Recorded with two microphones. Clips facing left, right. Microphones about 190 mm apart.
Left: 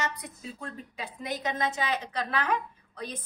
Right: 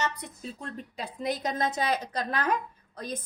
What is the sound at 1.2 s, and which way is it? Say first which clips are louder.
A woman's voice: right 2 dB; 35° right (ahead or behind).